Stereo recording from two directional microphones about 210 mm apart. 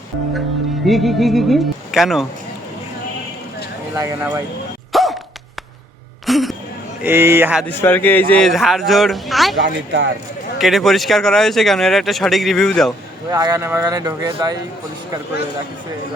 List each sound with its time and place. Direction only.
0.9 s speech: centre (ahead or behind)
3.9 s speech: 15° right (ahead or behind)
4.9 s music: centre (ahead or behind)
6.2 s a sound: centre (ahead or behind)
7.0 s speech: 10° right (ahead or behind)
7.7 s speech: 10° left (ahead or behind)
9.6 s speech: 55° right (ahead or behind)
10.6 s speech: centre (ahead or behind)
13.3 s speech: 15° right (ahead or behind)